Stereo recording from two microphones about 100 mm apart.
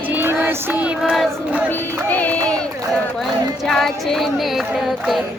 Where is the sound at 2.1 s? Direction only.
15° left (ahead or behind).